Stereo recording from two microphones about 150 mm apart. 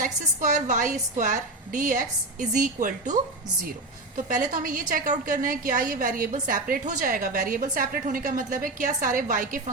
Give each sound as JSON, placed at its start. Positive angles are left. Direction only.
{"t": 0.0, "sound": "a woman's voice", "side_deg": -55}
{"t": 4.3, "sound": "a woman's voice", "side_deg": -65}